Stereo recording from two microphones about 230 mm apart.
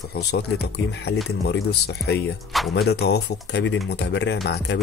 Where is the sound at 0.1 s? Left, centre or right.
Left.